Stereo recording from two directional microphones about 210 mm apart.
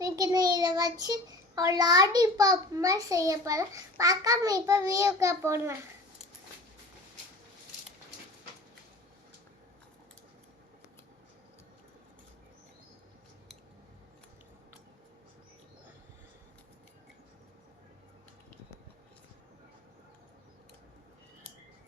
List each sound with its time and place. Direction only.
0.0 s child singing: 15° right (ahead or behind)